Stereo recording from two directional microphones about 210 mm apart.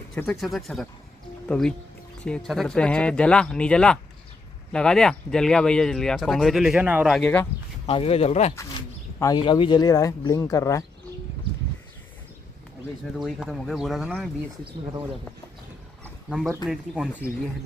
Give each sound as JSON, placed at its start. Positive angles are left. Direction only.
{"t": 0.1, "sound": "speech", "side_deg": 5}
{"t": 7.8, "sound": "speech", "side_deg": 25}
{"t": 9.2, "sound": "speech", "side_deg": 20}
{"t": 13.2, "sound": "speech", "side_deg": 0}
{"t": 16.6, "sound": "speech", "side_deg": -5}